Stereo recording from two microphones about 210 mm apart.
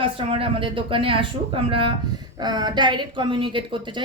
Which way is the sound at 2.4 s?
20° right (ahead or behind).